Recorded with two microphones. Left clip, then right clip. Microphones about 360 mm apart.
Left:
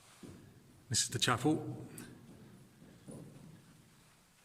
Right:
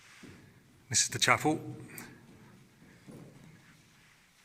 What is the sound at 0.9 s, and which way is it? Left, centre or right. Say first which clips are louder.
A man's voice: right 6 dB; centre.